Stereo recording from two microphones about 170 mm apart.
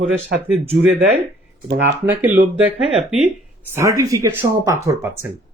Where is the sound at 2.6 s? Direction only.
5° right (ahead or behind).